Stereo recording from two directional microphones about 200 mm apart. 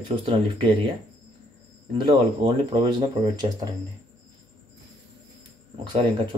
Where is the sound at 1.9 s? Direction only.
25° right (ahead or behind).